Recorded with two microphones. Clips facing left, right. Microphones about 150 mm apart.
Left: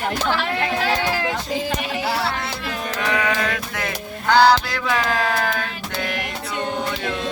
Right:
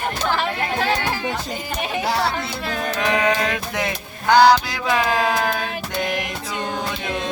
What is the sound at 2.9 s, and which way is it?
Music, 20° right (ahead or behind).